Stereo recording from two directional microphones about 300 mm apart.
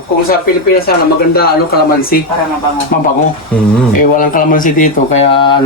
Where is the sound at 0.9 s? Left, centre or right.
Left.